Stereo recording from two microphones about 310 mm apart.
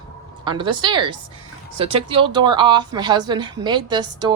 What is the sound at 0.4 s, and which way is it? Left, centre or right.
Speech, centre.